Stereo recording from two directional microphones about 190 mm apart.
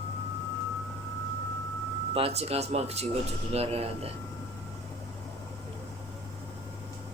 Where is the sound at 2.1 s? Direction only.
30° right (ahead or behind).